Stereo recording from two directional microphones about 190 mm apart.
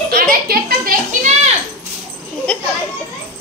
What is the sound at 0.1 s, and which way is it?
Music, 50° right (ahead or behind).